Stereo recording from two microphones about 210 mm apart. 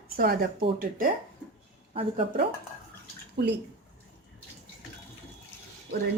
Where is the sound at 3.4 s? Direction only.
55° right (ahead or behind).